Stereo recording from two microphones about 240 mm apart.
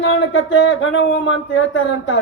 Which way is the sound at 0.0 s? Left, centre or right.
Left.